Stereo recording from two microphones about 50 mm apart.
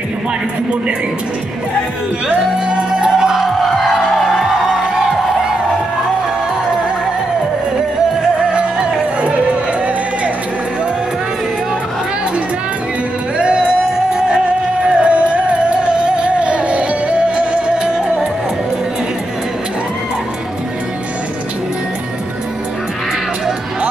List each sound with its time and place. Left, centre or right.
2.2 s music: centre
3.6 s music: centre
8.5 s music: right
13.4 s music: centre